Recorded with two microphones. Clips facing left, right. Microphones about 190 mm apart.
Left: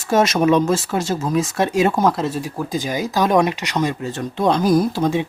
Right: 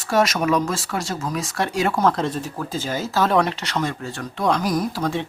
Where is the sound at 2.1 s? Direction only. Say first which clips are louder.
Left 2 dB; 5° left (ahead or behind).